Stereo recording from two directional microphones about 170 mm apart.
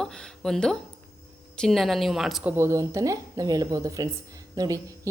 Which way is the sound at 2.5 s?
15° right (ahead or behind).